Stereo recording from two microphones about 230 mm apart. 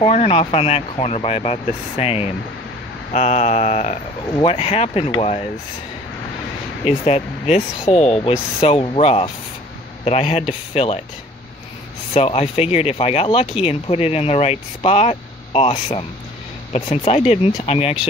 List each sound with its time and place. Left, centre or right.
0.0 s speech: left
6.8 s speech: left
12.1 s speech: left